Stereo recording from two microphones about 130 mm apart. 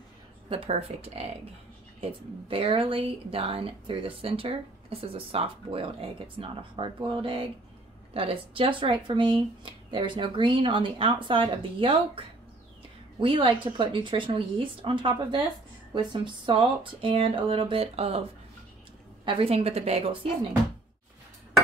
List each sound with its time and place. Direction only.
0.5 s speech: 45° right (ahead or behind)
19.2 s speech: 45° right (ahead or behind)